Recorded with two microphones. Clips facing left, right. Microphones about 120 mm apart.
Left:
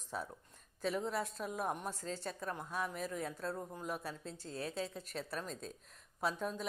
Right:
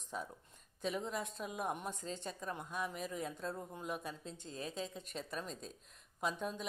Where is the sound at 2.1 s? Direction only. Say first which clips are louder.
Left 2 dB; 15° right (ahead or behind).